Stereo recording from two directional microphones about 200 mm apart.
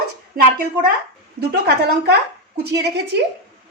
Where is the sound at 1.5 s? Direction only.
55° right (ahead or behind).